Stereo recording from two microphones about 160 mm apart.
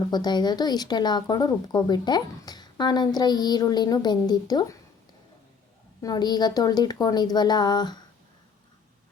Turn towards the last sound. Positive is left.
turn(degrees=25)  # may be behind; listen again after turning